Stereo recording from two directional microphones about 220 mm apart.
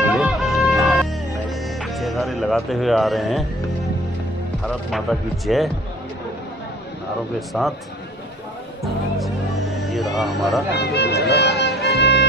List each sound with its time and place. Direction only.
0.0 s music: centre (ahead or behind)
5.5 s a man's voice: centre (ahead or behind)
7.3 s a man's voice: centre (ahead or behind)
9.8 s a sound: centre (ahead or behind)
10.7 s music: 45° left (ahead or behind)